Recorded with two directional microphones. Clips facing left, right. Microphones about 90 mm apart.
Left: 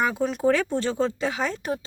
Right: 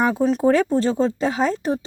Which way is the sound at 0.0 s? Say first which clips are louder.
Right 5 dB; 35° right (ahead or behind).